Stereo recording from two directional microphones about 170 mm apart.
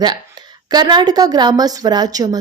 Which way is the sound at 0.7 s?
25° right (ahead or behind).